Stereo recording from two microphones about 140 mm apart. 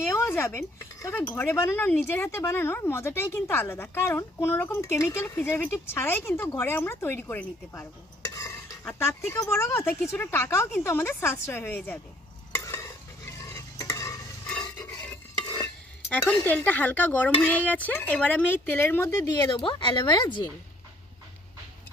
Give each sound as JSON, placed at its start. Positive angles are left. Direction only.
{"t": 0.1, "sound": "speech", "side_deg": 20}
{"t": 8.3, "sound": "dishes", "side_deg": 20}
{"t": 10.8, "sound": "speech", "side_deg": 15}
{"t": 12.5, "sound": "stir", "side_deg": 20}
{"t": 16.0, "sound": "speech", "side_deg": 10}